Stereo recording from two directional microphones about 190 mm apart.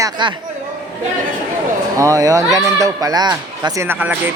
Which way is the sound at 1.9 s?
15° right (ahead or behind).